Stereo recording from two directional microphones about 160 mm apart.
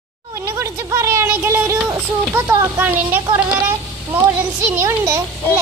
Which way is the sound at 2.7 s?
10° right (ahead or behind).